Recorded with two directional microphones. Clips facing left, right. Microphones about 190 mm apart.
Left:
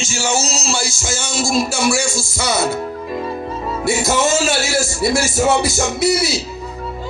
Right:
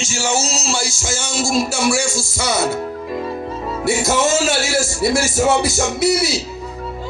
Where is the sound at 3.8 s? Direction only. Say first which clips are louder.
Even; 60° right (ahead or behind).